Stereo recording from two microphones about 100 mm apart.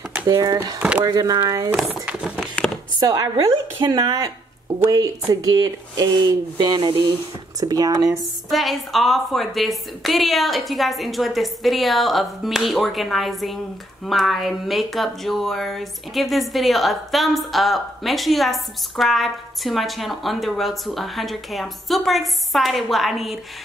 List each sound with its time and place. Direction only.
0.3 s speech: 35° right (ahead or behind)
0.7 s speech: 15° right (ahead or behind)
1.0 s speech: 40° right (ahead or behind)
1.8 s speech: 5° right (ahead or behind)
2.4 s a sound: 5° left (ahead or behind)
3.0 s speech: 40° right (ahead or behind)
5.3 s speech: 40° right (ahead or behind)
8.5 s speech: centre (ahead or behind)